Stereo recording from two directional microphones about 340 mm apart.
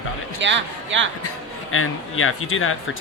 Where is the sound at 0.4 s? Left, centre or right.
Right.